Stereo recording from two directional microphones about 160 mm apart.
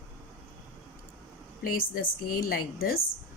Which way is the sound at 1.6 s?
60° left (ahead or behind).